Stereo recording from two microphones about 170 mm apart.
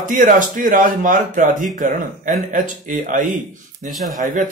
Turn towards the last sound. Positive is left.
turn(degrees=-50)  # may be behind; listen again after turning